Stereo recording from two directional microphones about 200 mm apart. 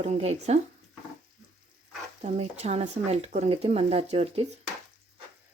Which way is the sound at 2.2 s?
30° right (ahead or behind).